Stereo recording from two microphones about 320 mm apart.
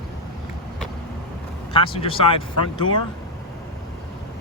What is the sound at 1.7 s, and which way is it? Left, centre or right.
Speech, centre.